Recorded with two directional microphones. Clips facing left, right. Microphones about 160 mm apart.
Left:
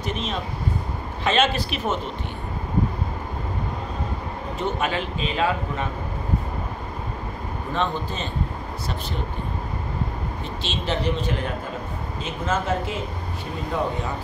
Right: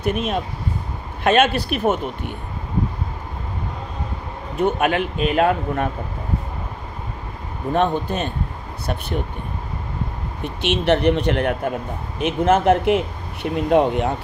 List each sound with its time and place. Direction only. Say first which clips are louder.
0.0 s speech: right 6 dB; 55° right (ahead or behind)
4.6 s speech: right 7 dB; 55° right (ahead or behind)
7.7 s speech: right 7 dB; 55° right (ahead or behind)
10.4 s speech: right 11 dB; 65° right (ahead or behind)